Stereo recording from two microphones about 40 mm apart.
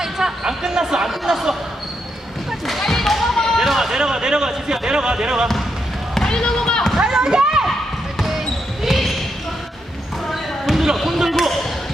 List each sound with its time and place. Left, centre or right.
0.0 s speech: centre
2.6 s basketball bounce: centre
3.5 s speech: centre
6.1 s basketball bounce: centre
7.0 s a sound: centre
8.8 s basketball bounce: centre
10.3 s basketball bounce: centre